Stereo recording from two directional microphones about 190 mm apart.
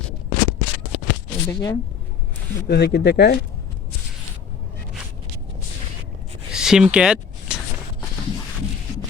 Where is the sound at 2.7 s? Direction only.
60° left (ahead or behind).